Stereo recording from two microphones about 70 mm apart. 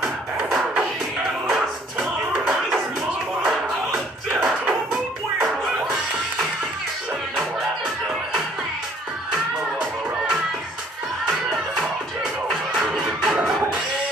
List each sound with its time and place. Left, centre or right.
1.5 s music: centre
12.7 s music: centre